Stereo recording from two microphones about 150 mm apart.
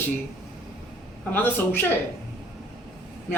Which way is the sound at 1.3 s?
15° left (ahead or behind).